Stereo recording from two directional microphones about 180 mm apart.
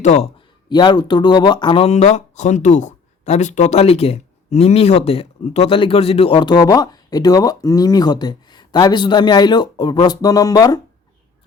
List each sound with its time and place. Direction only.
0.0 s speech: 40° left (ahead or behind)
0.7 s speech: 25° left (ahead or behind)